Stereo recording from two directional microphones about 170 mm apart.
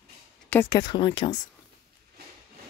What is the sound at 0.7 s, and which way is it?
Speech, 25° left (ahead or behind).